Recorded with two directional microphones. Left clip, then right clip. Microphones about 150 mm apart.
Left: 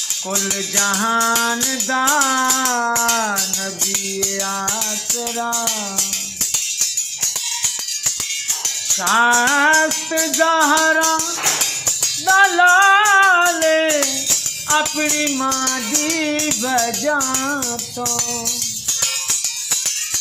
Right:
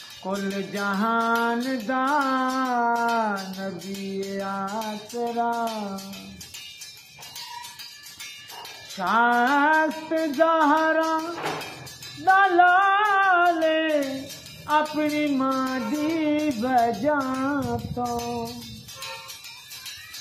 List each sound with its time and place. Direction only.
0.8 s music: 10° left (ahead or behind)
8.9 s music: 10° left (ahead or behind)
12.3 s music: 15° left (ahead or behind)